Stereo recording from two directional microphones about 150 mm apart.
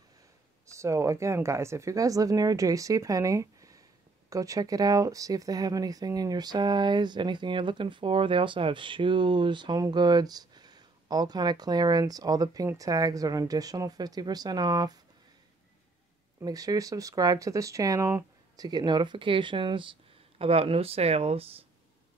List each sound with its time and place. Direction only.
0.7 s speech: 20° right (ahead or behind)
16.3 s speech: 25° right (ahead or behind); by 21.5 s 40° right (ahead or behind)